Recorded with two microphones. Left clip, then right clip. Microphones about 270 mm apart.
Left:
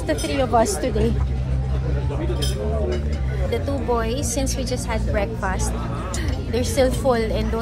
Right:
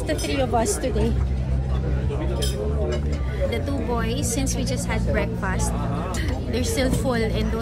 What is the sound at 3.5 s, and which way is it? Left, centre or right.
A woman's voice, centre.